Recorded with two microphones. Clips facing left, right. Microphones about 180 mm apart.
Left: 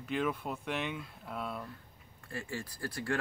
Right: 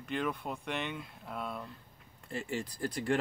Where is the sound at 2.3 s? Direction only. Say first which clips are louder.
Right 4 dB; 20° right (ahead or behind).